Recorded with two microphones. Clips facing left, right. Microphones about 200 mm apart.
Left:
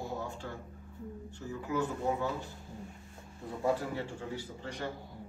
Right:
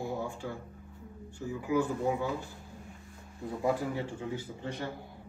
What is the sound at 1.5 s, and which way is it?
Speech, 10° right (ahead or behind).